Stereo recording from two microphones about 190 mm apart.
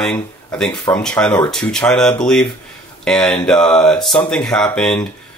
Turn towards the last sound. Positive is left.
turn(degrees=5)  # may be behind; listen again after turning